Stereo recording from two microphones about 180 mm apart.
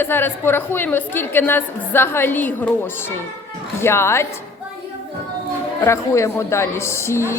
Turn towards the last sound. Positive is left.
turn(degrees=15)  # may be behind; listen again after turning